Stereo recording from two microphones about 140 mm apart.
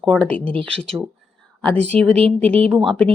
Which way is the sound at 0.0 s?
5° left (ahead or behind).